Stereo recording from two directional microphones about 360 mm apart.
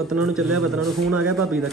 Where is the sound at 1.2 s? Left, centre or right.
Centre.